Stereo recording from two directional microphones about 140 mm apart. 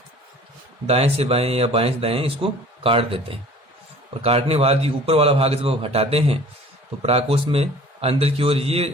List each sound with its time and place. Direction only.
0.9 s speech: 45° right (ahead or behind)